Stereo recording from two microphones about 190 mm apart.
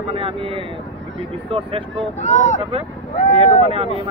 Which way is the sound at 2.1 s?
40° left (ahead or behind).